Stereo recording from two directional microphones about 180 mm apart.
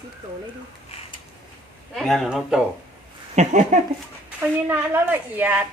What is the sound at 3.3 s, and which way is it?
Speech, 40° right (ahead or behind).